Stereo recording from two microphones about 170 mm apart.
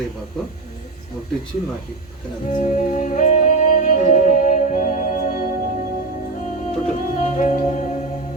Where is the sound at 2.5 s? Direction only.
45° left (ahead or behind).